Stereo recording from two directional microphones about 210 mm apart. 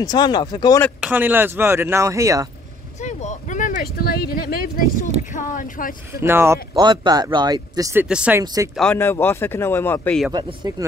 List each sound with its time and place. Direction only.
0.0 s speech: 20° left (ahead or behind)
1.0 s speech: 10° right (ahead or behind)
3.0 s speech: 35° left (ahead or behind)
6.2 s speech: 10° right (ahead or behind)
8.7 s speech: 5° left (ahead or behind)
10.3 s speech: 20° right (ahead or behind)